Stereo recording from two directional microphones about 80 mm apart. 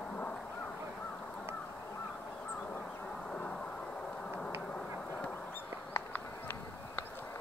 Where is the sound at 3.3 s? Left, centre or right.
Centre.